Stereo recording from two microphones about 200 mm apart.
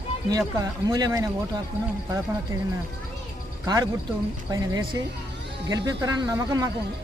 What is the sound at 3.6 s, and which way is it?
Speech, 20° right (ahead or behind).